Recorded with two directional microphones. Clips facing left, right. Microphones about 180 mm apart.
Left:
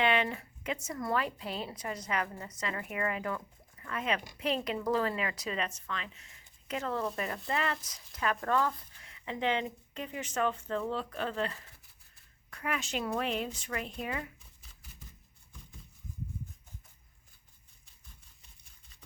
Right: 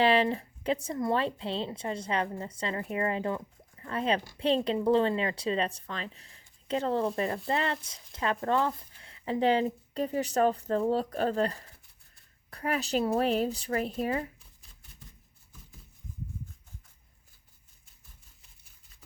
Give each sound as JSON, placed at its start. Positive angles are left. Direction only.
{"t": 0.0, "sound": "a woman's voice", "side_deg": -30}